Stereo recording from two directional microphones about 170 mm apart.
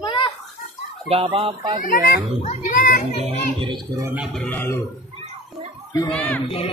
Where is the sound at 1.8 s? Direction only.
55° left (ahead or behind).